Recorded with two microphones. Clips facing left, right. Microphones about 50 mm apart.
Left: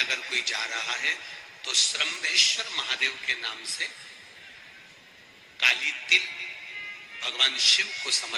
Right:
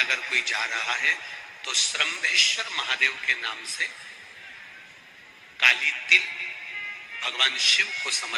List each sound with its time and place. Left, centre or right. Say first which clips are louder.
0.0 s a man's voice: right 4 dB; right
5.5 s a man's voice: right 4 dB; right